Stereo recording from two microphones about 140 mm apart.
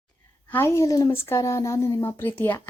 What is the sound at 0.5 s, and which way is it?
Speech, 20° left (ahead or behind).